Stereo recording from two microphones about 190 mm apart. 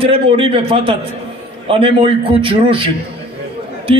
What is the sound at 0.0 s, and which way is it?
Speech, 30° right (ahead or behind).